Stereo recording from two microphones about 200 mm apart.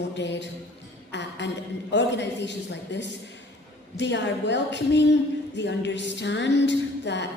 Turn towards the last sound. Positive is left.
turn(degrees=60)  # may be behind; listen again after turning